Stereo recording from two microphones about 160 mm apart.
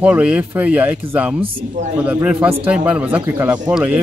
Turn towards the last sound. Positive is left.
turn(degrees=-5)  # may be behind; listen again after turning